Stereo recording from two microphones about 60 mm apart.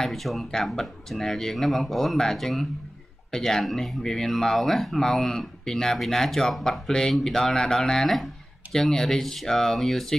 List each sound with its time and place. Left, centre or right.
0.0 s speech: centre